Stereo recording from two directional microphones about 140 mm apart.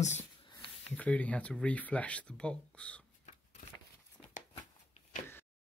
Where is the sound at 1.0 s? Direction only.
10° left (ahead or behind).